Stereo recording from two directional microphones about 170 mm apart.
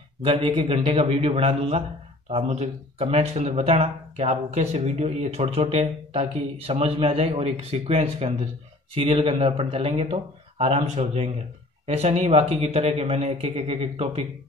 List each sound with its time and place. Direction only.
0.2 s speech: 30° right (ahead or behind)